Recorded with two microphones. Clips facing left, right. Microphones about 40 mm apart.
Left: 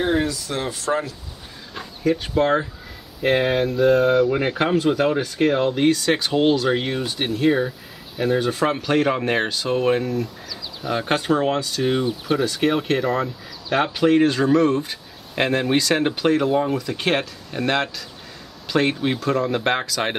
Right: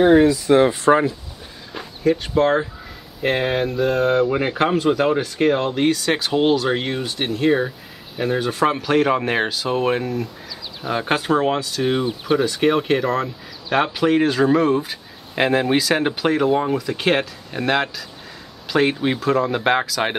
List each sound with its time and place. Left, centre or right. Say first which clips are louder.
0.0 s speech: right 8 dB; centre
0.5 s speech: right 10 dB; right
1.7 s speech: right 2 dB; centre